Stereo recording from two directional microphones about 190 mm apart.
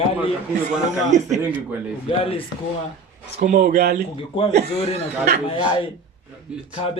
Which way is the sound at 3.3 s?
40° right (ahead or behind).